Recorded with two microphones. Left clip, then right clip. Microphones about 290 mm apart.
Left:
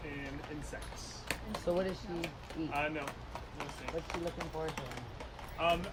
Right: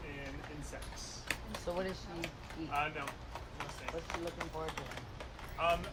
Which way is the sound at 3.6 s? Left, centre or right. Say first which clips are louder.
Left 2 dB; left.